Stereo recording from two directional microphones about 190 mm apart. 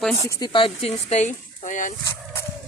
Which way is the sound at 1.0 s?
35° left (ahead or behind).